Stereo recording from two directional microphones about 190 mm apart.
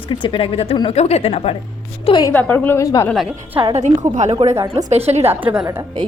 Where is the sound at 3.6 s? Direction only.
35° right (ahead or behind).